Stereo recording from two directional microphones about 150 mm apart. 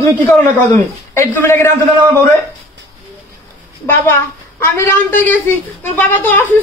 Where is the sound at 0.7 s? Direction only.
15° left (ahead or behind).